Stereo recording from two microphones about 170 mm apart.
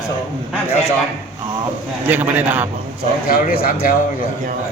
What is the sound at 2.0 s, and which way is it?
Speech, 10° right (ahead or behind).